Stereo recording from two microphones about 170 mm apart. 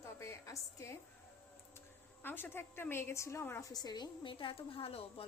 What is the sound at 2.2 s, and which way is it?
A woman's voice, 10° left (ahead or behind).